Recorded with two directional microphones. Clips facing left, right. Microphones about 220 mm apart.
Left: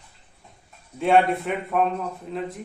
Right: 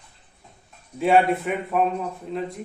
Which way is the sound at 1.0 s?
Centre (ahead or behind).